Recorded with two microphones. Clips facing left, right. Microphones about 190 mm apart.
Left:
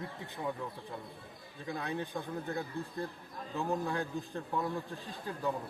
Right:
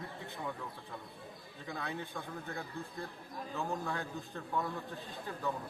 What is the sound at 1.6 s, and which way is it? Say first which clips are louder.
A man's voice: left 4 dB; 15° left (ahead or behind).